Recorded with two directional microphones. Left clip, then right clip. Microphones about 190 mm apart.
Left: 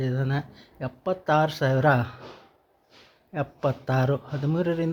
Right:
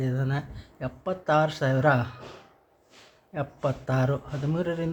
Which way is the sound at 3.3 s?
20° left (ahead or behind).